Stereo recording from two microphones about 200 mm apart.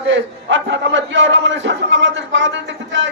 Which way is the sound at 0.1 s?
65° right (ahead or behind).